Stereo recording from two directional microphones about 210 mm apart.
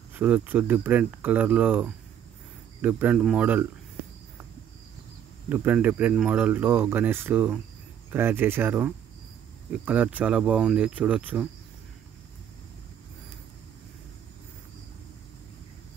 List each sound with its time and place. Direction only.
0.1 s speech: 5° right (ahead or behind)
5.5 s speech: 10° right (ahead or behind)